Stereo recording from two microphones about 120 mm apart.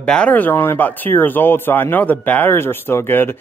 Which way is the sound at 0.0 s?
10° left (ahead or behind).